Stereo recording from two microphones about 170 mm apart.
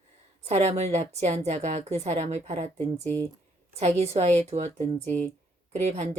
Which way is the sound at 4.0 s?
40° right (ahead or behind).